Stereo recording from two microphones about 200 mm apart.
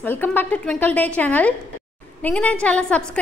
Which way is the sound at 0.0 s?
10° left (ahead or behind).